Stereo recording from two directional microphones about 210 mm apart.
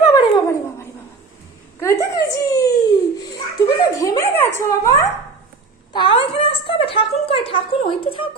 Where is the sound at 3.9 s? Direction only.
15° left (ahead or behind).